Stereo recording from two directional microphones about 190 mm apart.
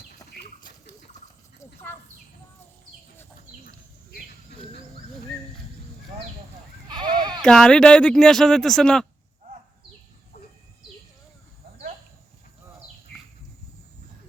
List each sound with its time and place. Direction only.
1.5 s horse: 10° left (ahead or behind)
6.8 s sheep: 25° right (ahead or behind)
7.4 s speech: 5° left (ahead or behind)